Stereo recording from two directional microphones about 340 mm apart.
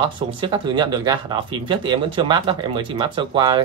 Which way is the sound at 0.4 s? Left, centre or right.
Centre.